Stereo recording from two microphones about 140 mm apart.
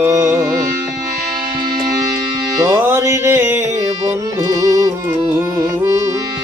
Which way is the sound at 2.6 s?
20° right (ahead or behind).